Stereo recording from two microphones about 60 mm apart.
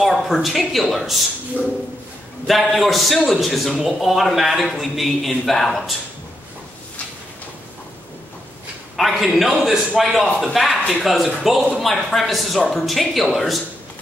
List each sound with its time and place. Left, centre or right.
0.0 s speech: centre
1.6 s a sound: right
2.4 s speech: centre
8.9 s a man's voice: centre